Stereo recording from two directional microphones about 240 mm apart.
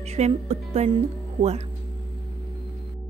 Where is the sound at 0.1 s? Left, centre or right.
Right.